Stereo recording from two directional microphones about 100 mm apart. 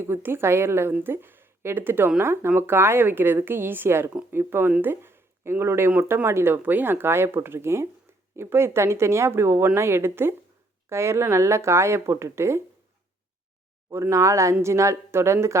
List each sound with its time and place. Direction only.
0.0 s speech: 20° right (ahead or behind)
4.1 s speech: 10° right (ahead or behind)
13.9 s speech: 30° right (ahead or behind)